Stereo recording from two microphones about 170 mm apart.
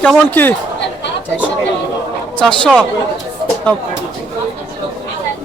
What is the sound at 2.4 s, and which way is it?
Speech, 5° left (ahead or behind).